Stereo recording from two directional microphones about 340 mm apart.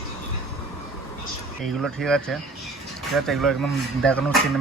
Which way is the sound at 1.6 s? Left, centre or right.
Centre.